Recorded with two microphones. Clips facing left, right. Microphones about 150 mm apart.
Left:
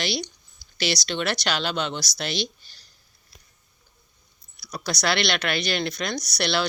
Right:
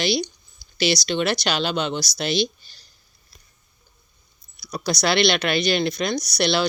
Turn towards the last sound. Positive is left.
turn(degrees=-20)  # may be behind; listen again after turning